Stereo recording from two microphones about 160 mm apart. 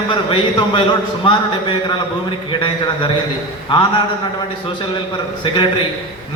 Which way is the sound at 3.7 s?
30° left (ahead or behind).